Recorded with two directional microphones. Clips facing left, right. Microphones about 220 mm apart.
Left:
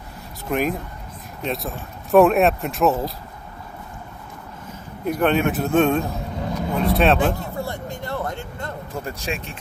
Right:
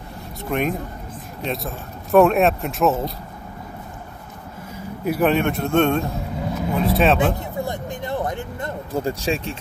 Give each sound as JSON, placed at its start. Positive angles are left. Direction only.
{"t": 0.5, "sound": "speech", "side_deg": 0}
{"t": 5.0, "sound": "speech", "side_deg": -5}
{"t": 7.3, "sound": "a sound", "side_deg": -15}
{"t": 8.9, "sound": "speech", "side_deg": -30}